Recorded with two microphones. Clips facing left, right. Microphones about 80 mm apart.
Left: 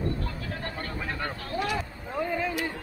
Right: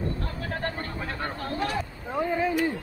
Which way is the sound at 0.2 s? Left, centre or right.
Right.